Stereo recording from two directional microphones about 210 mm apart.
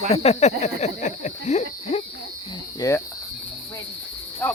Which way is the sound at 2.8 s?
15° left (ahead or behind).